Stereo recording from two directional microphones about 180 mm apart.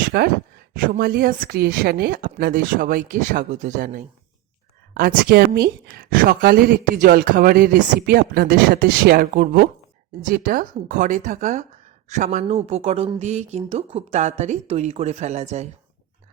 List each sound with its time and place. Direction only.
0.1 s speech: 60° right (ahead or behind)
4.9 s a woman's voice: 60° right (ahead or behind); by 15.7 s 40° right (ahead or behind)